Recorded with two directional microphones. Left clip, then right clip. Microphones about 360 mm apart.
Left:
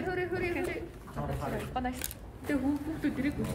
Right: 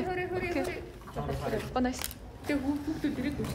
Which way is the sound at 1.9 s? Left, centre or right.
Centre.